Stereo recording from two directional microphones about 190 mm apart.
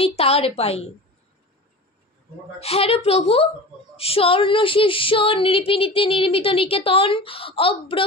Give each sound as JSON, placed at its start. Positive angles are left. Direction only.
{"t": 0.0, "sound": "a woman's voice", "side_deg": 30}
{"t": 2.6, "sound": "a woman's voice", "side_deg": 30}
{"t": 3.9, "sound": "female singing", "side_deg": 30}